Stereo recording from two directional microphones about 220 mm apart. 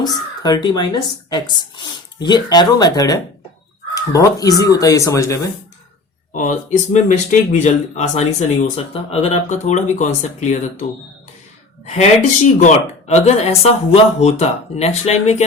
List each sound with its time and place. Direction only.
0.0 s speech: 20° left (ahead or behind)
6.3 s speech: 35° left (ahead or behind)
11.9 s speech: 30° left (ahead or behind)